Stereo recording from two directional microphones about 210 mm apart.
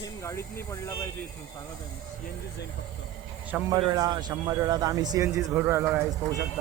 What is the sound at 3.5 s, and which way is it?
A man's voice, 15° right (ahead or behind).